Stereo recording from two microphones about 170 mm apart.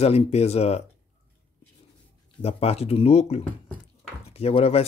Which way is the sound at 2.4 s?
35° left (ahead or behind).